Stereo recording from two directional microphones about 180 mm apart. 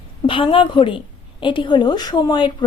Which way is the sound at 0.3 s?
30° left (ahead or behind).